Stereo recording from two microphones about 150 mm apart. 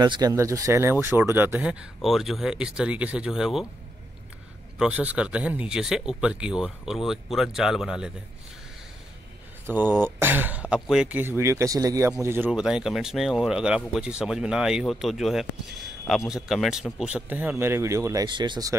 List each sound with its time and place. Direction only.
0.0 s speech: 25° right (ahead or behind); by 3.6 s 5° right (ahead or behind)
4.7 s speech: 10° right (ahead or behind)
9.7 s speech: 15° right (ahead or behind)
12.4 s speech: 5° right (ahead or behind); by 18.8 s 25° right (ahead or behind)